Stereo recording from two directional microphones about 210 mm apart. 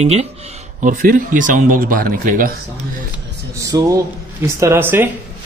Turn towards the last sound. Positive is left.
turn(degrees=-10)  # may be behind; listen again after turning